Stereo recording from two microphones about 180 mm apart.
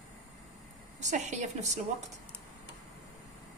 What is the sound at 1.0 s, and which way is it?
Speech, 40° right (ahead or behind).